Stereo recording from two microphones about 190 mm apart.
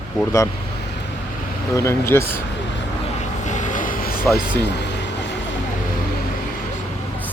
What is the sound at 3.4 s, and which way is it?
Vehicle, 40° left (ahead or behind).